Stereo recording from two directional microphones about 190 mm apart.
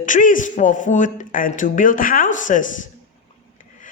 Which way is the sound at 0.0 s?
45° left (ahead or behind).